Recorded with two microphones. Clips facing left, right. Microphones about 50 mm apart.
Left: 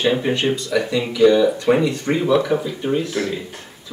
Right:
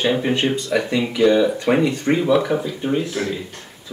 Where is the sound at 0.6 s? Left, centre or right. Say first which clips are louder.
Even; centre.